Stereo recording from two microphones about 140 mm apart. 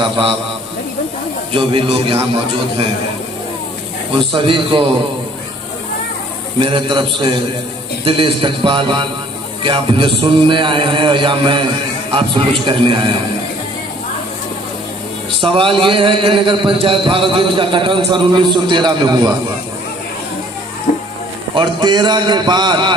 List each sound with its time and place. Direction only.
0.0 s speech: 35° right (ahead or behind)
1.5 s speech: 40° right (ahead or behind)
4.3 s speech: 40° right (ahead or behind)
6.6 s speech: 35° right (ahead or behind)
15.4 s speech: 40° right (ahead or behind)
20.9 s music: 65° left (ahead or behind)
21.5 s speech: 30° right (ahead or behind)